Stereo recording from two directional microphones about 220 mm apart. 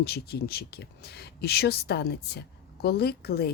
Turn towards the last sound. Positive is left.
turn(degrees=45)  # may be behind; listen again after turning